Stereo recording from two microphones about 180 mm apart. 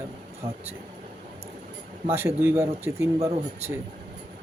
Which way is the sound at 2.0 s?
10° right (ahead or behind).